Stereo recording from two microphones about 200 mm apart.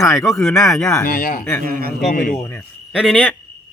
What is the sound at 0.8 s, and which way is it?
Speech, 15° left (ahead or behind).